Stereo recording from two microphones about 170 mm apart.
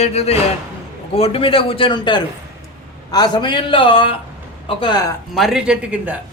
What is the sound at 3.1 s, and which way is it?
A man's voice, 25° left (ahead or behind).